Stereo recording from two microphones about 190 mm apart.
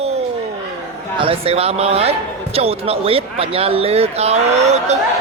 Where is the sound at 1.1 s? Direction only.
30° right (ahead or behind).